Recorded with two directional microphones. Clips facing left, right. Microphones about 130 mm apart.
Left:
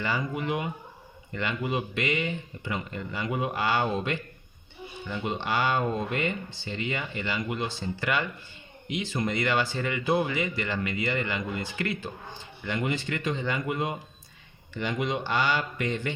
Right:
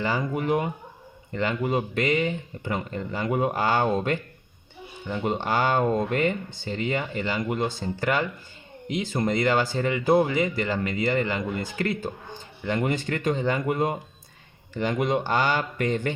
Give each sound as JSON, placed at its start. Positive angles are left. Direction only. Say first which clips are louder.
{"t": 0.0, "sound": "speech", "louder": "right 4 dB", "side_deg": -40}
{"t": 5.2, "sound": "speech", "louder": "right 3 dB", "side_deg": -45}